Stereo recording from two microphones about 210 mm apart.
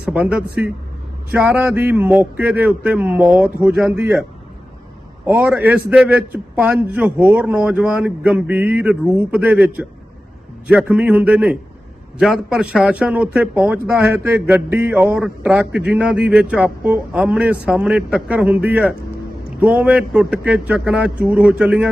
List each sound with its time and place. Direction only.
0.0 s a man's voice: 5° right (ahead or behind)